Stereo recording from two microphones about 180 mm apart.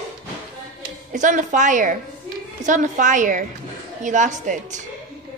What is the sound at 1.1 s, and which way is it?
A woman's voice, 45° right (ahead or behind).